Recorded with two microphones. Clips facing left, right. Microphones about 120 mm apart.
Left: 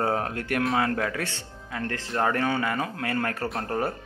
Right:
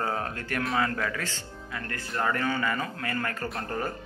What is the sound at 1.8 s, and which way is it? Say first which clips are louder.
A man's voice: left 5 dB; 90° left.